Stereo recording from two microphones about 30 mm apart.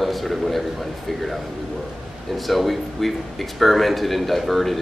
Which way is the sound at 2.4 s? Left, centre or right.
Centre.